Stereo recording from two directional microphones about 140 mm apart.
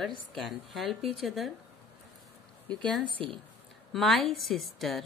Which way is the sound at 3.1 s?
40° right (ahead or behind).